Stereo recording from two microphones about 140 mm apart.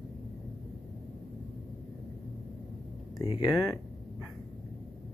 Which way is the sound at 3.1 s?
25° left (ahead or behind).